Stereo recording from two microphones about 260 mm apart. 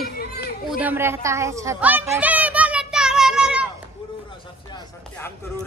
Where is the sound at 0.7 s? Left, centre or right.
Centre.